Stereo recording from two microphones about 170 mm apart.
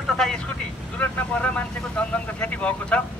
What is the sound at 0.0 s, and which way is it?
Vehicle, 5° left (ahead or behind).